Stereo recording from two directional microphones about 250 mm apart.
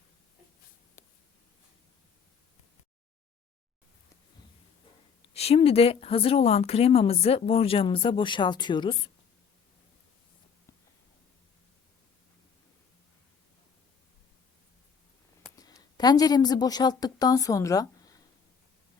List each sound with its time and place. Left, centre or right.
5.3 s speech: left
15.5 s a woman's voice: centre